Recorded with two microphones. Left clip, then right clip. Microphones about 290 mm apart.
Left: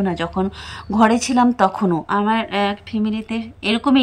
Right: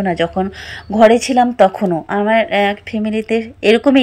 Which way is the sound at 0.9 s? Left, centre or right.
Left.